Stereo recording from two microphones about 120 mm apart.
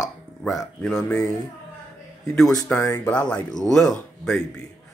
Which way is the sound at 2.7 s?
20° left (ahead or behind).